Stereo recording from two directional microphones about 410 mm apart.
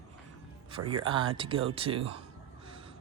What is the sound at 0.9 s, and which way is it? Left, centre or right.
A man's voice, centre.